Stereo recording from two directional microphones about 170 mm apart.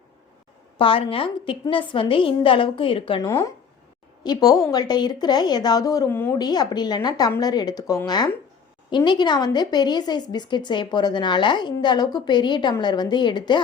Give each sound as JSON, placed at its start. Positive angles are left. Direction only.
{"t": 0.8, "sound": "a woman's voice", "side_deg": 30}
{"t": 3.2, "sound": "speech", "side_deg": 15}
{"t": 6.4, "sound": "speech", "side_deg": 25}